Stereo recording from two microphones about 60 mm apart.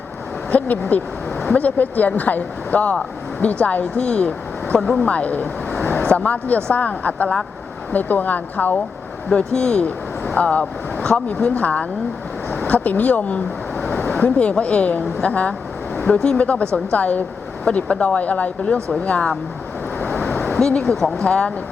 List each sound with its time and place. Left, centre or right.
0.5 s speech: left; by 5.0 s centre
5.0 s speech: left
9.3 s speech: centre
14.0 s a sound: left
14.6 s speech: left
16.0 s speech: centre
20.0 s vehicle: left
20.4 s a sound: centre
21.2 s speech: centre